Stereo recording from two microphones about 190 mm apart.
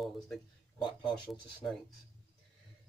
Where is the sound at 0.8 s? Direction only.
25° left (ahead or behind).